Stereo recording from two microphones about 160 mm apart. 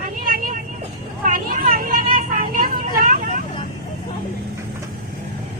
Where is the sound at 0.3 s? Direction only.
60° right (ahead or behind).